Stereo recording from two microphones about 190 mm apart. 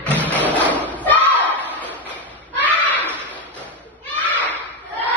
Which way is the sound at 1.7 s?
10° left (ahead or behind).